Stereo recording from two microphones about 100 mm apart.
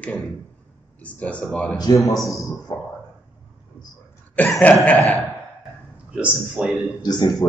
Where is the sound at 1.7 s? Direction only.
40° left (ahead or behind).